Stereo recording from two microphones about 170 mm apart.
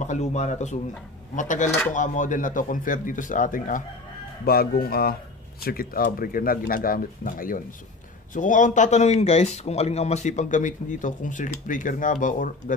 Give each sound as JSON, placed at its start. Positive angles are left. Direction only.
{"t": 0.0, "sound": "speech", "side_deg": 45}
{"t": 4.5, "sound": "speech", "side_deg": 60}